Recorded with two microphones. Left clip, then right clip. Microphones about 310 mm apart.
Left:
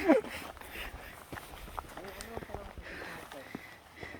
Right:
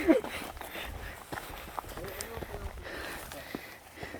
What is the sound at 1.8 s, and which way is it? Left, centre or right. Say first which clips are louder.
Run: right 2 dB; right.